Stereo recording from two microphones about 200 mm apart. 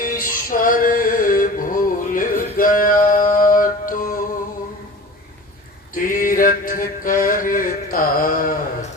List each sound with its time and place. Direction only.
0.0 s music: 45° left (ahead or behind)
5.9 s music: 45° left (ahead or behind)